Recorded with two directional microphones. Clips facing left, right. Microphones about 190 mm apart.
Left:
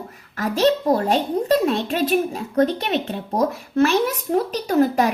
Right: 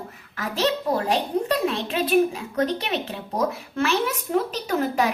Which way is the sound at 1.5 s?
40° left (ahead or behind).